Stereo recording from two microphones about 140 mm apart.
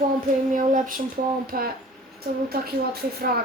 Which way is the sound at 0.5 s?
75° right (ahead or behind).